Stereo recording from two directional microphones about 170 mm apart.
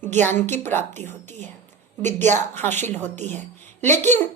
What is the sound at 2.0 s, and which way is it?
Speech, 45° right (ahead or behind).